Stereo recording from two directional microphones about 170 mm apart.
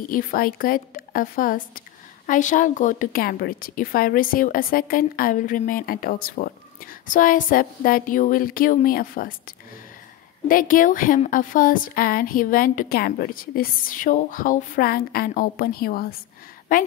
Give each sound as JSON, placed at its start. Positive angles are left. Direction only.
{"t": 0.1, "sound": "a woman's voice", "side_deg": 55}
{"t": 10.5, "sound": "a woman's voice", "side_deg": 55}